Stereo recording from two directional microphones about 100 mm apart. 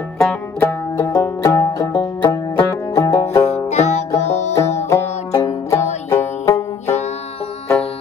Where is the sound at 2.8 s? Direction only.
30° left (ahead or behind).